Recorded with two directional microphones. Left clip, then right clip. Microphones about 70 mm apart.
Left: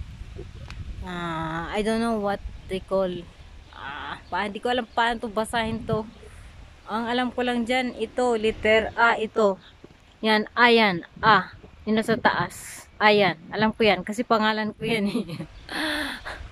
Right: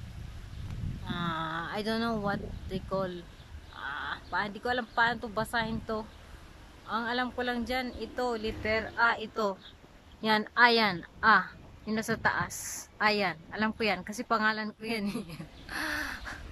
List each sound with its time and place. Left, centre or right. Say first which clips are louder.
1.0 s speech: left 4 dB; left
8.2 s a woman's voice: left 10 dB; left
8.6 s speech: left 8 dB; left
10.2 s a woman's voice: left 5 dB; left
12.6 s a woman's voice: left 10 dB; left